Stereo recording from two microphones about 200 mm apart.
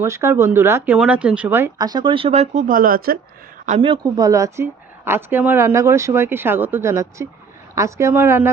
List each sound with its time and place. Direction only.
0.0 s speech: 15° right (ahead or behind); by 3.2 s 45° right (ahead or behind)
3.7 s speech: 25° right (ahead or behind)